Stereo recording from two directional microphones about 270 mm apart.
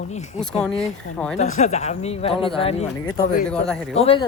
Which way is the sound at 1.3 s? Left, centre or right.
Left.